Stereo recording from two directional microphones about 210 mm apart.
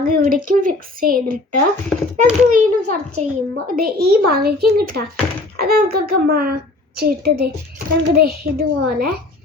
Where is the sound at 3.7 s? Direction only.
45° right (ahead or behind).